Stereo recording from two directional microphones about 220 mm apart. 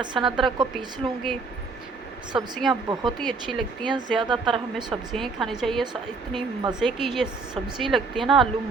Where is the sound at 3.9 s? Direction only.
20° right (ahead or behind).